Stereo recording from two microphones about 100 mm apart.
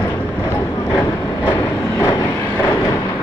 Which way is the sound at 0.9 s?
35° left (ahead or behind).